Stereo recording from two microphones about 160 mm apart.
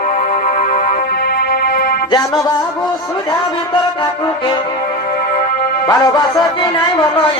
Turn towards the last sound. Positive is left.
turn(degrees=25)  # may be behind; listen again after turning